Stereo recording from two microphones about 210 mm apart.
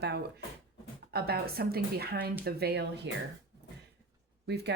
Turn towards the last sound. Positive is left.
turn(degrees=-50)  # may be behind; listen again after turning